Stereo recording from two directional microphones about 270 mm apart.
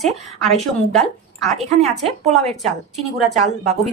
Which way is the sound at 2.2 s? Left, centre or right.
Right.